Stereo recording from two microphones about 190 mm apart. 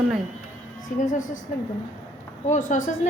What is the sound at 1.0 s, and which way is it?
Speech, 40° left (ahead or behind).